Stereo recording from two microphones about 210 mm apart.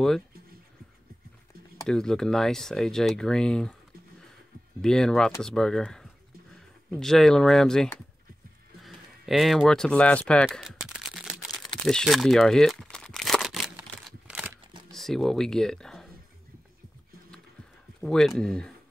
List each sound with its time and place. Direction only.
1.9 s speech: 5° left (ahead or behind)
4.8 s speech: 5° left (ahead or behind)
8.8 s a sound: centre (ahead or behind)
14.9 s speech: centre (ahead or behind)
18.0 s speech: centre (ahead or behind)